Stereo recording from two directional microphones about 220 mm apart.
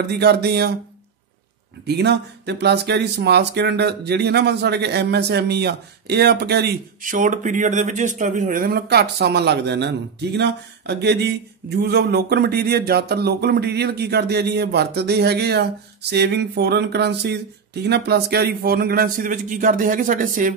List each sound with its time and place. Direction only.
0.0 s speech: 50° right (ahead or behind)
1.9 s a man's voice: 50° right (ahead or behind)